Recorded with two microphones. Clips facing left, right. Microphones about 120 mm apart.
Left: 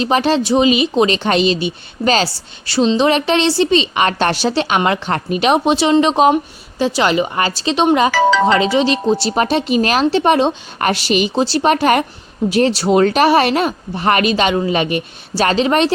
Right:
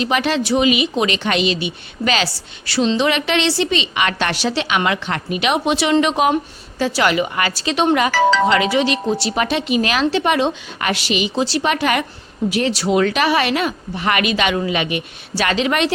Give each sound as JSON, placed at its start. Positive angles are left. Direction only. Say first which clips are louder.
{"t": 0.0, "sound": "a woman's voice", "louder": "left 4 dB", "side_deg": 35}